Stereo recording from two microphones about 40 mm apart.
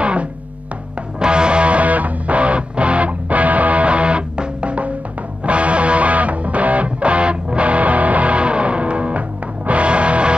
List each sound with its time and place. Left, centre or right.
0.0 s music: right